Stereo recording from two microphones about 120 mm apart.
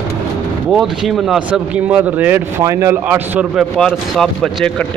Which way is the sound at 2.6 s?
25° right (ahead or behind).